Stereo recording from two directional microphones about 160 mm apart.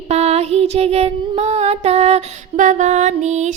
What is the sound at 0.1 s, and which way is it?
Music, 40° right (ahead or behind).